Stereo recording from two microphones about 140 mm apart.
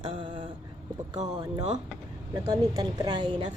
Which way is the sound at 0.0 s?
35° right (ahead or behind).